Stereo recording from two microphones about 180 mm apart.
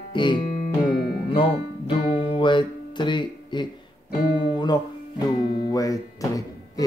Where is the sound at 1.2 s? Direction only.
30° left (ahead or behind).